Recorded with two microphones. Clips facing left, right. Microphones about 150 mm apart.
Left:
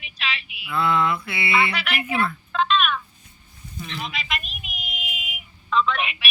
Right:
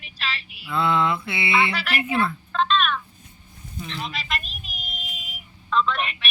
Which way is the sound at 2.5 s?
5° left (ahead or behind).